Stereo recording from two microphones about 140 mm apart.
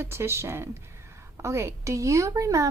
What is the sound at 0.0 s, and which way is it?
A woman's voice, 20° right (ahead or behind).